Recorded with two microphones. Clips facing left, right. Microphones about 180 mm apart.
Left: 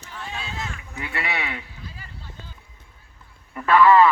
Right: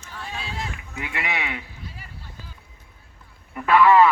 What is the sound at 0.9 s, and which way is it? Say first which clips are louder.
Speech: even; 15° right (ahead or behind).